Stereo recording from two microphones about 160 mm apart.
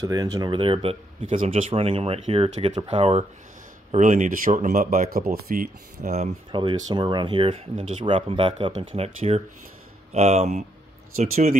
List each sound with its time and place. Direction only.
0.0 s speech: 25° right (ahead or behind); by 6.1 s 65° right (ahead or behind)
6.5 s speech: 30° right (ahead or behind); by 11.5 s 45° right (ahead or behind)